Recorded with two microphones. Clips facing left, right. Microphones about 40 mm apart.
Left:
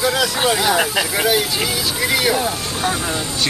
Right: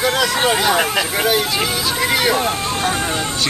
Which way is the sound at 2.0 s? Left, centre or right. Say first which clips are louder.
Right 1 dB; centre.